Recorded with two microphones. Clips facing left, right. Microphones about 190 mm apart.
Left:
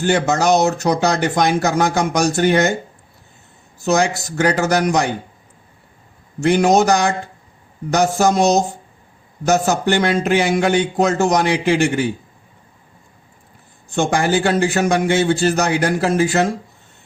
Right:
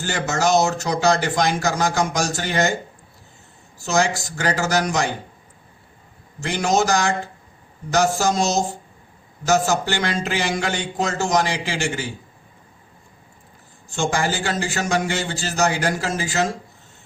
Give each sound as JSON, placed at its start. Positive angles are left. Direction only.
{"t": 0.0, "sound": "speech", "side_deg": 60}
{"t": 3.8, "sound": "speech", "side_deg": 60}
{"t": 6.4, "sound": "speech", "side_deg": 60}
{"t": 8.2, "sound": "speech", "side_deg": 60}
{"t": 13.9, "sound": "speech", "side_deg": 60}